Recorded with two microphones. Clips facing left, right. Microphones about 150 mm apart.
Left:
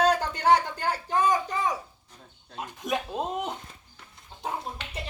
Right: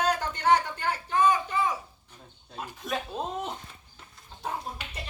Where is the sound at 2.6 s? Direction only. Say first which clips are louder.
Left 3 dB; 15° left (ahead or behind).